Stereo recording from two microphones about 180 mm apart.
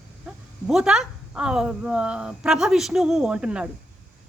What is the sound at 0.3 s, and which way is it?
A woman's voice, 5° right (ahead or behind).